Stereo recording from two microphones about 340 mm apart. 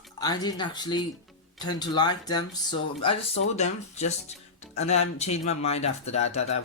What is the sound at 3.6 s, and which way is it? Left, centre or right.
Speech, centre.